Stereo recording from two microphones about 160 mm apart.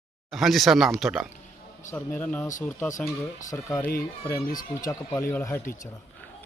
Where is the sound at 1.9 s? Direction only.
10° left (ahead or behind).